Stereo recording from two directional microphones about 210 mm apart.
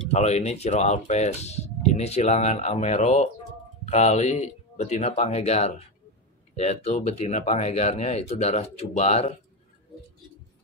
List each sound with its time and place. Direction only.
0.1 s speech: 30° left (ahead or behind)